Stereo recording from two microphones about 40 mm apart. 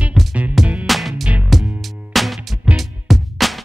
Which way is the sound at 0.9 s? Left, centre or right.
Centre.